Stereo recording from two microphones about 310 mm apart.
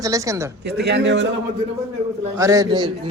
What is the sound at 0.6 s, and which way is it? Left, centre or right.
Speech, right.